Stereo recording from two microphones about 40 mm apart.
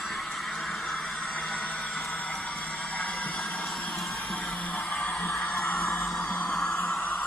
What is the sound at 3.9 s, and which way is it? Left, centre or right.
Music, centre.